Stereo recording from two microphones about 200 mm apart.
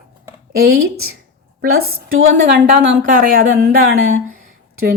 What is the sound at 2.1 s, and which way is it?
A woman's voice, 70° right (ahead or behind).